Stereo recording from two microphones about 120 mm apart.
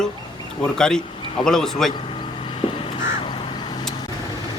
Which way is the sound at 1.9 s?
45° left (ahead or behind).